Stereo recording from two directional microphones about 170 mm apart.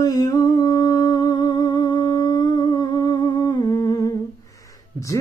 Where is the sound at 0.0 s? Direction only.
20° left (ahead or behind).